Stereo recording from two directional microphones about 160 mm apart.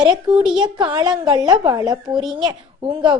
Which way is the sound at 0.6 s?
30° right (ahead or behind).